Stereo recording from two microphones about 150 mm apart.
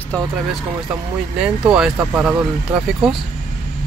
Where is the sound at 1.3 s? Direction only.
5° right (ahead or behind).